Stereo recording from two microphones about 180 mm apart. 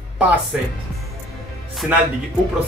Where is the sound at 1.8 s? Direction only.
Centre (ahead or behind).